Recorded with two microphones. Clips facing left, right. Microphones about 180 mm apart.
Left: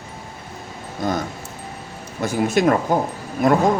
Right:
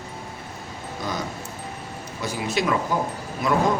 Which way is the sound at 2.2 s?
50° left (ahead or behind).